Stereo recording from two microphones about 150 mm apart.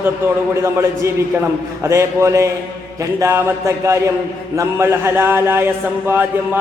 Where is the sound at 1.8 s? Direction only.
20° right (ahead or behind).